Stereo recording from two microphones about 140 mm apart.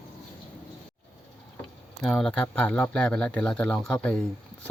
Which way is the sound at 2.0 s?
5° left (ahead or behind).